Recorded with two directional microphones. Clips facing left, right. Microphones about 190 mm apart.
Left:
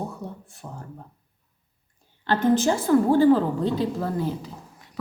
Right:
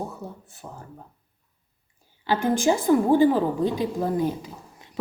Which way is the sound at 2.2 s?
10° right (ahead or behind).